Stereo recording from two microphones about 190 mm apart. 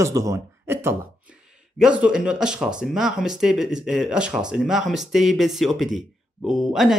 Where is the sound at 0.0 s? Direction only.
15° right (ahead or behind).